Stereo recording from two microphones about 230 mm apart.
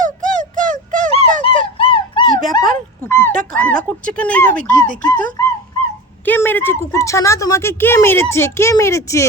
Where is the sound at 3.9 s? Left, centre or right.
Centre.